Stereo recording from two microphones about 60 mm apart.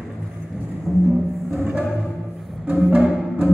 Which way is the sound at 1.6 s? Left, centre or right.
Centre.